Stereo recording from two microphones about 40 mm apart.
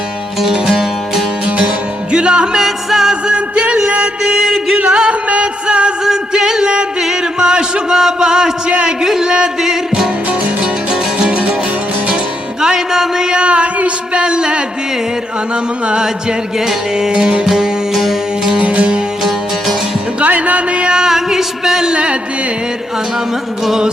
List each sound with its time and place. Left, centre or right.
0.4 s music: centre
2.1 s music: right
2.6 s music: centre
3.3 s music: right
4.4 s music: centre
4.9 s music: right
7.3 s a sound: centre
12.6 s a sound: centre
13.4 s a sound: right
17.1 s music: right
17.4 s music: centre
18.6 s music: right
20.2 s music: right
20.8 s music: centre